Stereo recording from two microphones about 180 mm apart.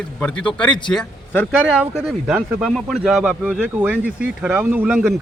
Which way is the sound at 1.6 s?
5° right (ahead or behind).